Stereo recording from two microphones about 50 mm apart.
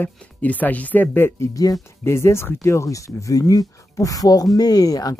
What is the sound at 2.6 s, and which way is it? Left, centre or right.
Speech, left.